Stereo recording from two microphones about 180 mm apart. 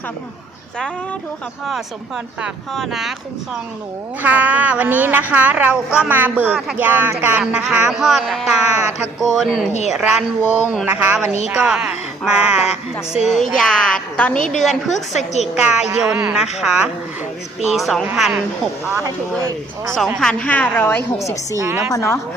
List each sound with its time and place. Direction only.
2.4 s a child's voice: centre (ahead or behind)
20.1 s a woman's voice: 5° left (ahead or behind)
21.6 s speech: 15° right (ahead or behind)
21.9 s a woman's voice: 15° left (ahead or behind)